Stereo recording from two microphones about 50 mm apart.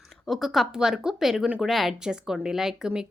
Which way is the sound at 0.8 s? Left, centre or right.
Centre.